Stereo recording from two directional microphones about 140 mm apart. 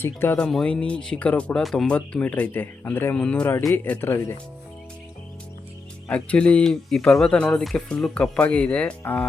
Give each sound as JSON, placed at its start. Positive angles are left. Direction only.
{"t": 0.0, "sound": "speech", "side_deg": 15}
{"t": 6.1, "sound": "speech", "side_deg": 10}